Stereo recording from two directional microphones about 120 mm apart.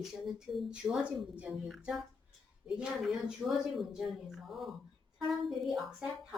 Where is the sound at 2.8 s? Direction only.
Centre (ahead or behind).